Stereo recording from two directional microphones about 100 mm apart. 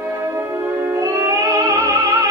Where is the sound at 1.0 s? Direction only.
30° right (ahead or behind).